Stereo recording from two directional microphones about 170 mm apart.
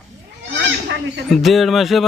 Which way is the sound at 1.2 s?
Centre (ahead or behind).